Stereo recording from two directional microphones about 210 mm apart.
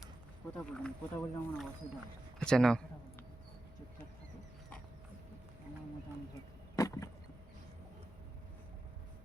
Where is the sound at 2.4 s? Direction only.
5° left (ahead or behind).